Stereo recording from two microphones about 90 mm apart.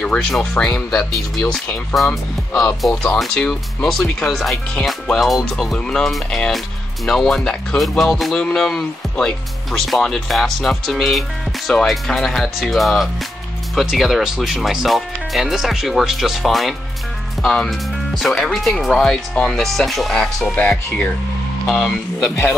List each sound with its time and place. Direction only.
0.0 s speech: 10° left (ahead or behind)
20.5 s speech: 15° left (ahead or behind)